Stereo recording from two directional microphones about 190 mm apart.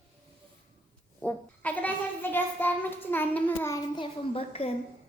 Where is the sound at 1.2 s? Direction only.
10° left (ahead or behind).